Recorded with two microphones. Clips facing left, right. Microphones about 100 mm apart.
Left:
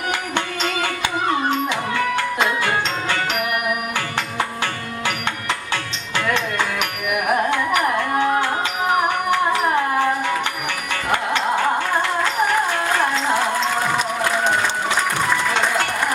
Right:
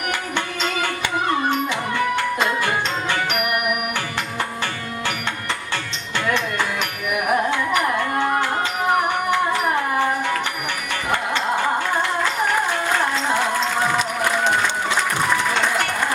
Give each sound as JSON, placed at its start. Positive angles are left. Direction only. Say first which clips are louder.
{"t": 0.1, "sound": "music", "louder": "left 2 dB", "side_deg": 15}
{"t": 6.3, "sound": "music", "louder": "even", "side_deg": 20}